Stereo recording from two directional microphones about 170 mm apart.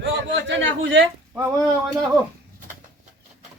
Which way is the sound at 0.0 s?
90° right.